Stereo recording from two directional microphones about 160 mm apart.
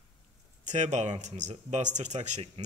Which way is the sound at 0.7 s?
50° right (ahead or behind).